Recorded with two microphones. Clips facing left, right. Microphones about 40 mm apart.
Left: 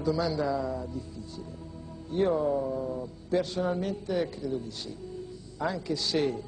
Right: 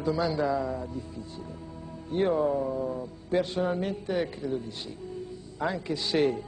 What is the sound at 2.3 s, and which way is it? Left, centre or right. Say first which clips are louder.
A man's voice: right 1 dB; centre.